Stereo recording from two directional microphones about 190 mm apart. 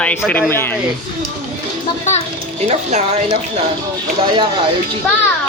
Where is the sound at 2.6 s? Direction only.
35° right (ahead or behind).